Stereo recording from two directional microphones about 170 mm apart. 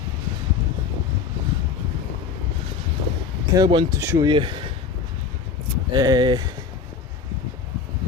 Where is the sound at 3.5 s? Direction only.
25° right (ahead or behind).